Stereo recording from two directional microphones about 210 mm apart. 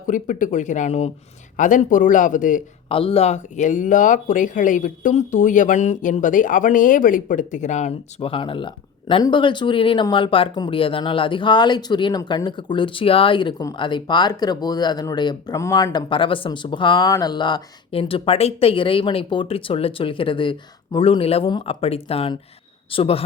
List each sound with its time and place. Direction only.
0.1 s speech: 40° left (ahead or behind)
2.9 s speech: 25° left (ahead or behind)